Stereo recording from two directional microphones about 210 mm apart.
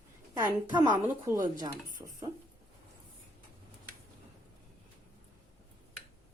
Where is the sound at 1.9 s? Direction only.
40° right (ahead or behind).